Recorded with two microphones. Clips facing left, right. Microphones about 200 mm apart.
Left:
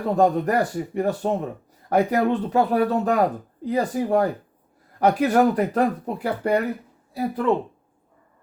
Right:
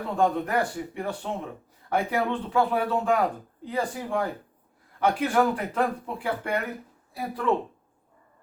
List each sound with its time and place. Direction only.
0.1 s speech: 40° left (ahead or behind)
7.2 s speech: 25° left (ahead or behind)